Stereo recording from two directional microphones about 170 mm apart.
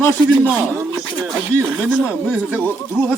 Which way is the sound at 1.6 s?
5° right (ahead or behind).